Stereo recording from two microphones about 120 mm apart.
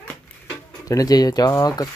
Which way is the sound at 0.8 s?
30° left (ahead or behind).